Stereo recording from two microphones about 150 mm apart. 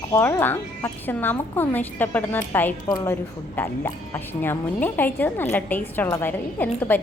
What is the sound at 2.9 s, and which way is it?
Speech, 25° left (ahead or behind).